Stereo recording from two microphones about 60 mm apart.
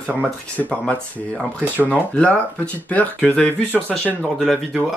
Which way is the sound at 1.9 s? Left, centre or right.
Left.